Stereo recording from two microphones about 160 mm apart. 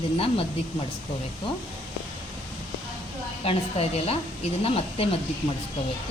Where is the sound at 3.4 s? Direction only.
40° left (ahead or behind).